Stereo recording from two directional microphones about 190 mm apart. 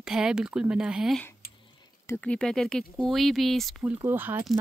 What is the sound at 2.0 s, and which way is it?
A woman's voice, 5° left (ahead or behind).